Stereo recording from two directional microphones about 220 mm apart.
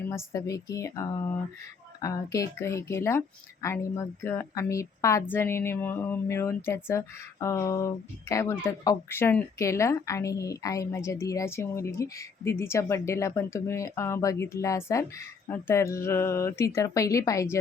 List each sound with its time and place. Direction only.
0.1 s speech: 15° left (ahead or behind)